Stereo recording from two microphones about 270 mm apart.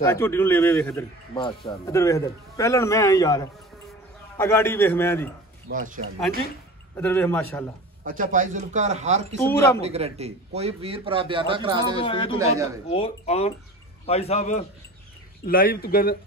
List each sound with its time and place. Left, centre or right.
0.0 s a man's voice: centre
5.7 s a man's voice: right
7.0 s a man's voice: centre
8.0 s a man's voice: right
9.4 s a man's voice: centre
9.8 s a man's voice: right
12.0 s a man's voice: centre